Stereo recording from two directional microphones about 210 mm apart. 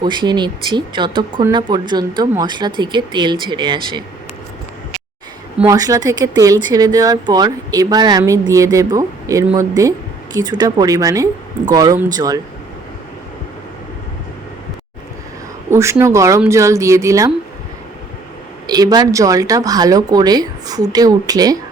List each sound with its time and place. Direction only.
0.0 s speech: 20° right (ahead or behind)
5.5 s speech: 15° right (ahead or behind)
15.7 s speech: 15° right (ahead or behind)
18.7 s speech: 20° right (ahead or behind)